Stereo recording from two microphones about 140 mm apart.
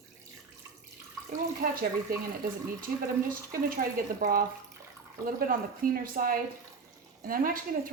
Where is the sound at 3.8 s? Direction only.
90° right.